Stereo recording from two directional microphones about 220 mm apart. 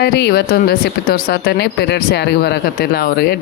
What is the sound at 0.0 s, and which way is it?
Speech, 45° left (ahead or behind).